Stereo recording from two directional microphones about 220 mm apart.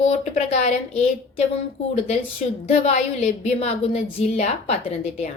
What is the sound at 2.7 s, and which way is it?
Speech, 30° left (ahead or behind).